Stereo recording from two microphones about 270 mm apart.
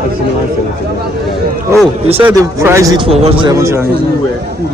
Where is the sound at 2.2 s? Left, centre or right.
Centre.